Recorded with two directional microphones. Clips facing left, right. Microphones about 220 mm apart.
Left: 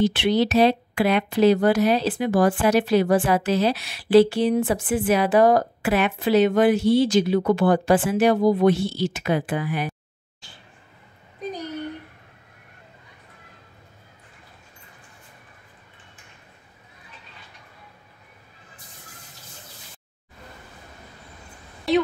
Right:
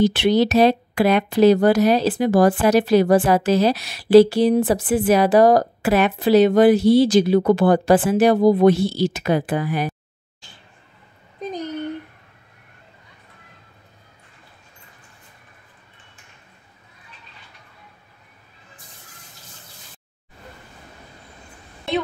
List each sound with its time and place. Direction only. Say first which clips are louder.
0.0 s speech: right 3 dB; 40° right (ahead or behind)